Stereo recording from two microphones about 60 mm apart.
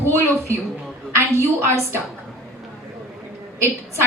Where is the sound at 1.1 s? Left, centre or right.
Right.